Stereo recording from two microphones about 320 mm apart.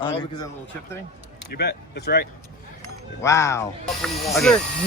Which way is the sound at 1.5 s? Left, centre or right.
Left.